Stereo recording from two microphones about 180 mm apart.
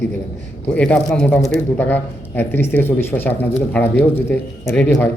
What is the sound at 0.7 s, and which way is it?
Speech, 5° left (ahead or behind).